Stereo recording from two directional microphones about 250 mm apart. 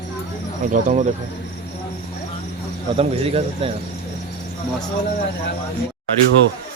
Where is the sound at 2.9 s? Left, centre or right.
Right.